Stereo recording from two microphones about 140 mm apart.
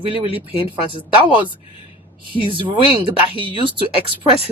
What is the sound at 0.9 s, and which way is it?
Speech, 35° right (ahead or behind).